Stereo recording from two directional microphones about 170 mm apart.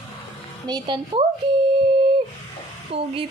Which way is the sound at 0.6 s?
25° right (ahead or behind).